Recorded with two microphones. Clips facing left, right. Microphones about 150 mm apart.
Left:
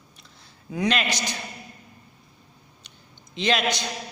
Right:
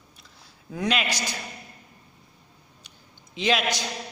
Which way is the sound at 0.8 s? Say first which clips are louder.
Left 2 dB; 5° right (ahead or behind).